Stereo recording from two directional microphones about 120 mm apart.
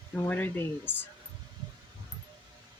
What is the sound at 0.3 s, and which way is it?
Speech, 15° left (ahead or behind).